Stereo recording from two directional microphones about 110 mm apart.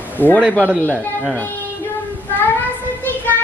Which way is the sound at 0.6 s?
15° right (ahead or behind).